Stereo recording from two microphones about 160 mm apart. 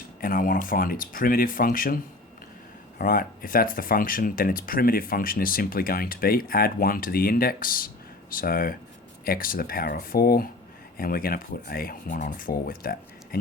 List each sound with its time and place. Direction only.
0.2 s speech: 60° left (ahead or behind)
3.0 s speech: 65° left (ahead or behind)